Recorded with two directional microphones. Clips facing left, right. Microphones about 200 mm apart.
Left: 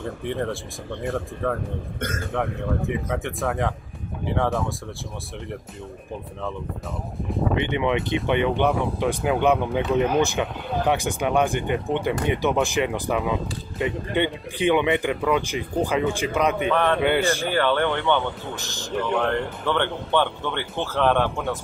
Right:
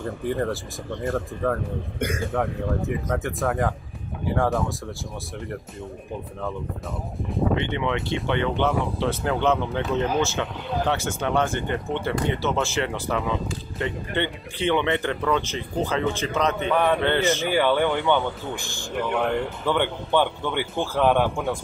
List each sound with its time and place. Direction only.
0.0 s speech: centre (ahead or behind)
2.0 s speech: 10° right (ahead or behind)
3.1 s speech: centre (ahead or behind)
7.5 s speech: 15° left (ahead or behind)
16.7 s speech: 10° right (ahead or behind)
17.0 s speech: 10° left (ahead or behind)
17.5 s speech: 10° right (ahead or behind)